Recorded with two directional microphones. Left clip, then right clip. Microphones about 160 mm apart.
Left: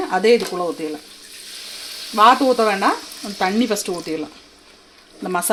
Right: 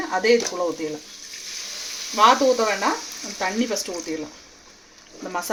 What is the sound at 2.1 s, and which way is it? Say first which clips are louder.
Speech: left 3 dB; 55° left (ahead or behind).